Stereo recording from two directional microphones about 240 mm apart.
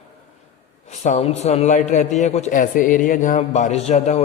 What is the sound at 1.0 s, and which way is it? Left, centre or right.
A man's voice, left.